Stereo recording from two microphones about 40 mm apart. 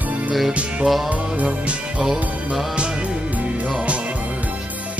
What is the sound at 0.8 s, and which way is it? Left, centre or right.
Music, centre.